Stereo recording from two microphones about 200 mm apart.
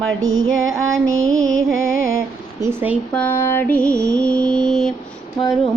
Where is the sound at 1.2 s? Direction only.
85° right.